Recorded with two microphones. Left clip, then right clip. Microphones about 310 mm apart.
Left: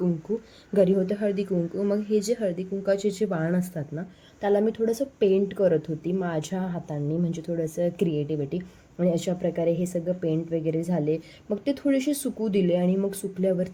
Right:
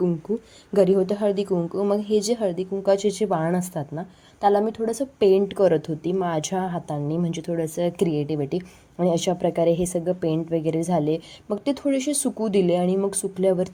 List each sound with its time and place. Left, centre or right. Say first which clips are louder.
0.7 s a woman's voice: right 3 dB; centre